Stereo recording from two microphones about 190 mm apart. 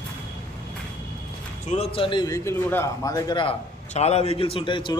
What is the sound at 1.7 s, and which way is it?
A man's voice, 30° left (ahead or behind).